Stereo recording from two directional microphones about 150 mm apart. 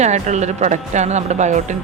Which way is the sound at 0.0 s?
50° right (ahead or behind).